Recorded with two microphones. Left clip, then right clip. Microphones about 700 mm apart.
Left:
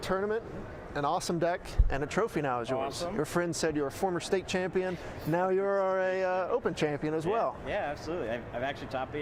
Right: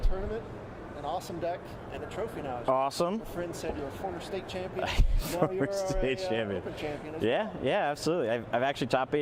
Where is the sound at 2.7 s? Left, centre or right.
Right.